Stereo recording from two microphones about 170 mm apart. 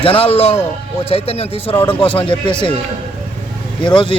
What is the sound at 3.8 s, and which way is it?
Speech, 30° left (ahead or behind).